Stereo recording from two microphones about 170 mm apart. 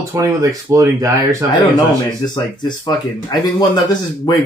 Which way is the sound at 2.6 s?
25° left (ahead or behind).